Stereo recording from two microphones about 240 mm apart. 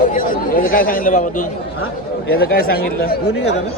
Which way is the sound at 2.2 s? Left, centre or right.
Left.